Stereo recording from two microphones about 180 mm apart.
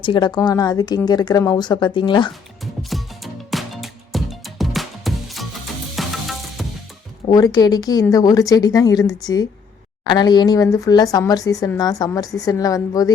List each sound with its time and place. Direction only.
0.0 s speech: 25° left (ahead or behind)
3.5 s music: centre (ahead or behind)
7.3 s speech: 20° left (ahead or behind)